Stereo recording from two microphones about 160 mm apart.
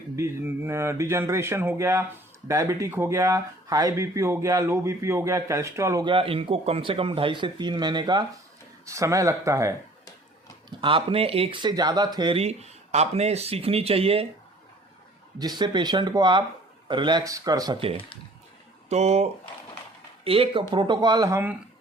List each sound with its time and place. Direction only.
0.2 s speech: 15° right (ahead or behind)
6.1 s speech: 35° right (ahead or behind); by 9.7 s 20° right (ahead or behind)
10.7 s speech: 30° right (ahead or behind)
15.4 s speech: 25° right (ahead or behind)
18.9 s speech: 45° right (ahead or behind); by 21.5 s 20° right (ahead or behind)